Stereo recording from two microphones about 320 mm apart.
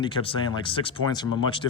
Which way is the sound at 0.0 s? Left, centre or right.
Centre.